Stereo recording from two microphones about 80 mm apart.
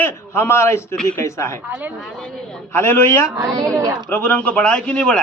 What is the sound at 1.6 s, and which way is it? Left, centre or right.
Speech, centre.